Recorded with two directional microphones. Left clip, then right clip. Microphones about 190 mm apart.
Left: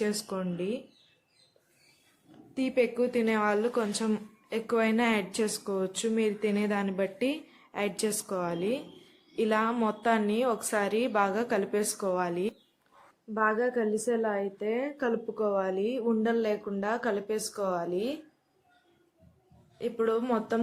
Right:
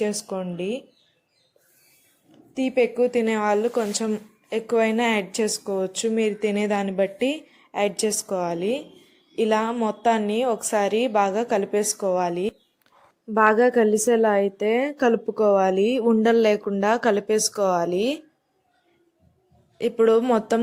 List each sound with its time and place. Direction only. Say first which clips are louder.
0.0 s speech: right 6 dB; 15° right (ahead or behind)
2.6 s speech: right 7 dB; 20° right (ahead or behind)
13.3 s a woman's voice: right 10 dB; 50° right (ahead or behind)
19.8 s speech: right 10 dB; 40° right (ahead or behind)